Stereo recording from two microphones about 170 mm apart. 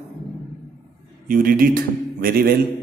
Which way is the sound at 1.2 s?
55° right (ahead or behind).